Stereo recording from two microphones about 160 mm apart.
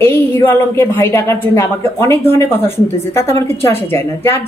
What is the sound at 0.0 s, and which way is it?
A woman's voice, 15° left (ahead or behind).